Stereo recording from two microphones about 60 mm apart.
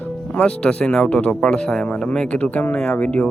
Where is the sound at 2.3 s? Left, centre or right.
Left.